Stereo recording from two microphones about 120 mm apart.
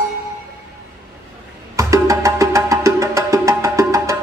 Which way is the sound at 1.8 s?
25° right (ahead or behind).